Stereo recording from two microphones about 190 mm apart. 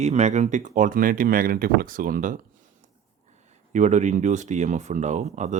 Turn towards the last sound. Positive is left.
turn(degrees=-40)  # may be behind; listen again after turning